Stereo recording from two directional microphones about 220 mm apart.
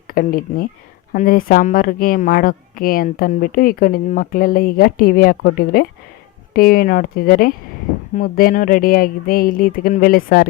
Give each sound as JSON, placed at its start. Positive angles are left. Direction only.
{"t": 0.1, "sound": "speech", "side_deg": 40}